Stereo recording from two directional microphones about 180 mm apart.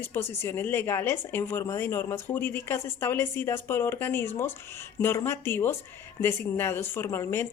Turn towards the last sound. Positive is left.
turn(degrees=15)  # may be behind; listen again after turning